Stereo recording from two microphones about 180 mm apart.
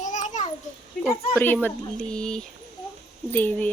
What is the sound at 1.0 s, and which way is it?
Speech, 10° left (ahead or behind).